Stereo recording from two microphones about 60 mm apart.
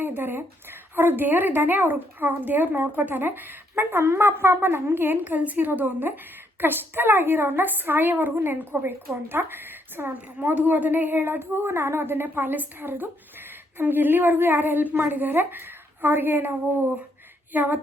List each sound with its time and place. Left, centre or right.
0.0 s a woman's voice: right